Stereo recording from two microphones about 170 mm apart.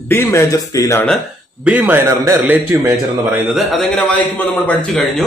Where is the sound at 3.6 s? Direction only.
5° left (ahead or behind).